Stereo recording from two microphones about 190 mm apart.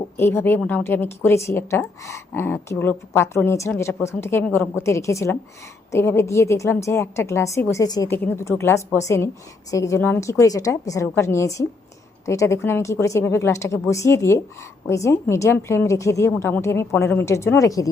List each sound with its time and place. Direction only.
0.2 s a woman's voice: 10° left (ahead or behind)